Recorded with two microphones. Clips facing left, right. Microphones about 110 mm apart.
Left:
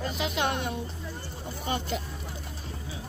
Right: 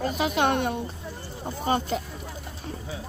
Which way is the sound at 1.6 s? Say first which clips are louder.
Right 6 dB; 40° right (ahead or behind).